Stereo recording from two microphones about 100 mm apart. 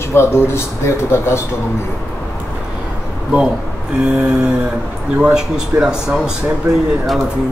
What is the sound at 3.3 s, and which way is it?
Speech, 10° right (ahead or behind).